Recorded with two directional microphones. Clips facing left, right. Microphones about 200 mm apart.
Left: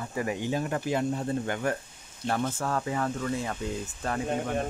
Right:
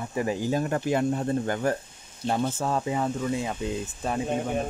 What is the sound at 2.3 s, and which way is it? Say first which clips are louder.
Speech: right 3 dB; 25° right (ahead or behind).